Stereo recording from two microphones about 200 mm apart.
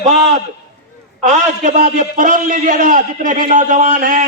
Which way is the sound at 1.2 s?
40° right (ahead or behind).